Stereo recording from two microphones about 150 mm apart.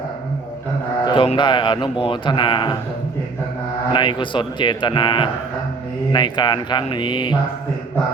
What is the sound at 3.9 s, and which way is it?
A man's voice, 35° left (ahead or behind).